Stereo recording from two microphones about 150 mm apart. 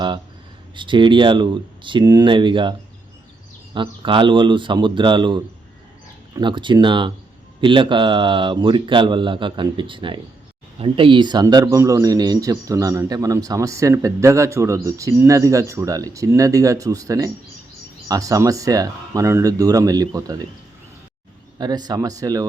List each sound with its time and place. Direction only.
0.8 s speech: 35° right (ahead or behind)
3.8 s a man's voice: 35° right (ahead or behind)
21.6 s a man's voice: 25° right (ahead or behind)